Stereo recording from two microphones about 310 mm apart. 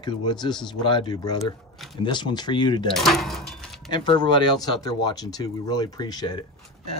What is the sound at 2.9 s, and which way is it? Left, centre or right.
Speech, centre.